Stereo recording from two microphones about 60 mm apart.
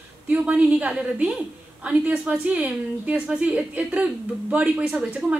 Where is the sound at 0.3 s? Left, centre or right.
Right.